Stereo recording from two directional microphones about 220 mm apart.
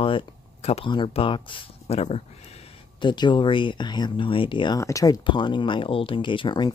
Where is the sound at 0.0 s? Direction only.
25° left (ahead or behind).